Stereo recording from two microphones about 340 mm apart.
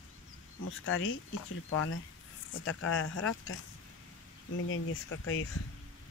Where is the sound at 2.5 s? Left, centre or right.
Left.